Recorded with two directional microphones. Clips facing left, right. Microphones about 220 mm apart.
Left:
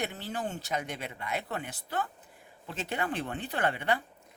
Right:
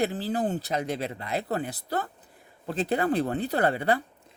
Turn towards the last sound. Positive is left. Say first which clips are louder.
# right 6 dB
turn(degrees=-35)  # may be behind; listen again after turning